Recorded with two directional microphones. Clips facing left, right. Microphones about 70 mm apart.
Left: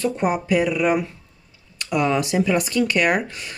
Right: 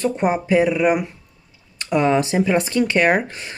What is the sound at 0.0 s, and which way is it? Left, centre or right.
Speech, right.